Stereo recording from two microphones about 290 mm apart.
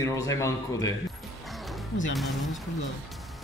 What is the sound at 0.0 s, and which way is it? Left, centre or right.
Speech, centre.